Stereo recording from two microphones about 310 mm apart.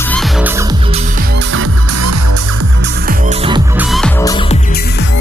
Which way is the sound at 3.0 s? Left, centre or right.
Right.